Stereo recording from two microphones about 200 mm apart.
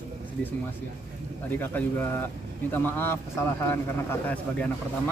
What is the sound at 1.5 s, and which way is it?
Speech, 10° left (ahead or behind).